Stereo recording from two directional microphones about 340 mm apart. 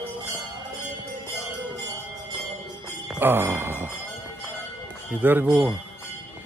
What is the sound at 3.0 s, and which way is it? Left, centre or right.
Speech, centre.